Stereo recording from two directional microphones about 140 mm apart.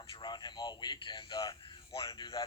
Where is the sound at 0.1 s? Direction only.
30° left (ahead or behind).